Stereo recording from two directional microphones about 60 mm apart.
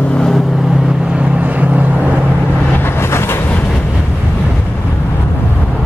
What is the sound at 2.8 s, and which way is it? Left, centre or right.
Vehicle, left.